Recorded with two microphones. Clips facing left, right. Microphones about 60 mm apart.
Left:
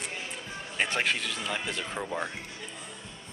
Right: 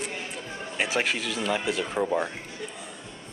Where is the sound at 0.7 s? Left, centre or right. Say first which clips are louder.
Right 2 dB; centre.